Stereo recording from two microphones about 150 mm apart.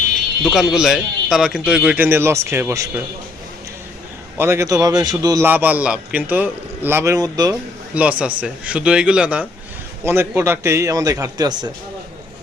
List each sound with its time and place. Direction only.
0.4 s speech: centre (ahead or behind); by 3.0 s 20° right (ahead or behind)
4.4 s a man's voice: 20° right (ahead or behind)
5.5 s a man's voice: 10° right (ahead or behind)
7.9 s a man's voice: 10° right (ahead or behind); by 11.7 s 25° right (ahead or behind)